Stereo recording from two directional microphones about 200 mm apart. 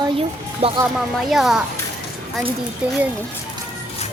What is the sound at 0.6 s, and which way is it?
Speech, 30° right (ahead or behind).